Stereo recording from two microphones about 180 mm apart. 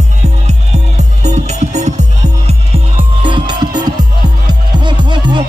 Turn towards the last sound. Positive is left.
turn(degrees=-25)  # may be behind; listen again after turning